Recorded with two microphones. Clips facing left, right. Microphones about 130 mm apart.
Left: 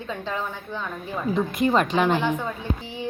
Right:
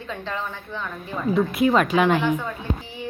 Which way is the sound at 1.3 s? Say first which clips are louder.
Right 2 dB; 5° right (ahead or behind).